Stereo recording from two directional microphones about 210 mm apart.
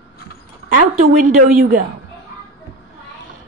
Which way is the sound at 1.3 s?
40° right (ahead or behind).